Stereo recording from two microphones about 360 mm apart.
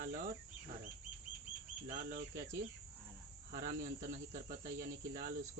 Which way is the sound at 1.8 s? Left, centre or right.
Right.